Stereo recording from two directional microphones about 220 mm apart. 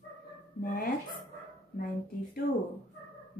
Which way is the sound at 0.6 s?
40° left (ahead or behind).